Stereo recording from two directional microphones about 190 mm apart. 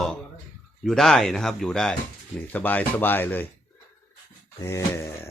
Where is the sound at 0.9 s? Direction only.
Centre (ahead or behind).